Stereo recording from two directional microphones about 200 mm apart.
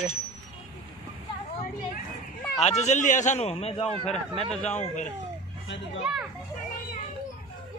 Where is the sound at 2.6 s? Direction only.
35° left (ahead or behind).